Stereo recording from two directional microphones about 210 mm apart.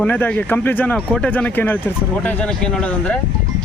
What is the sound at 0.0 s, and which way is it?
Speech, 5° left (ahead or behind).